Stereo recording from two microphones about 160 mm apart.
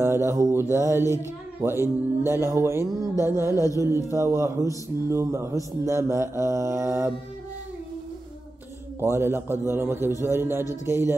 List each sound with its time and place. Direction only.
0.0 s mantra: 15° right (ahead or behind)
0.7 s music: 20° left (ahead or behind)
1.6 s speech: 15° right (ahead or behind)
9.0 s speech: 15° right (ahead or behind)